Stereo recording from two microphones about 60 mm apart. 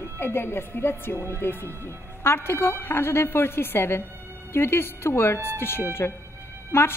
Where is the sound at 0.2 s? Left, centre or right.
Left.